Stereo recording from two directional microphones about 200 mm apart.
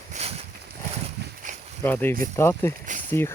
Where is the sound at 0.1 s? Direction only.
30° right (ahead or behind).